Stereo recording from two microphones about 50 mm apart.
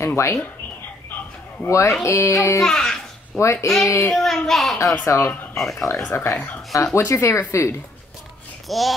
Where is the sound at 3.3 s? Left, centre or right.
Left.